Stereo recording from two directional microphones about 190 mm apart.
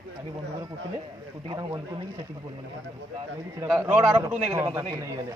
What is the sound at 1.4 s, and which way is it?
Speech, 20° right (ahead or behind).